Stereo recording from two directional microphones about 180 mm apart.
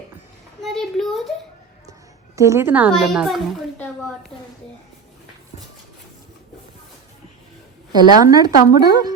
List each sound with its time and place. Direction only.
0.6 s a woman's voice: centre (ahead or behind)
1.9 s a sound: 15° right (ahead or behind)
2.9 s a child's voice: centre (ahead or behind)
7.9 s a woman's voice: 20° right (ahead or behind)